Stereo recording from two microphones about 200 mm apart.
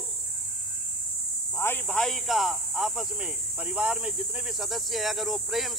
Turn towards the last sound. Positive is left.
turn(degrees=0)  # may be behind; listen again after turning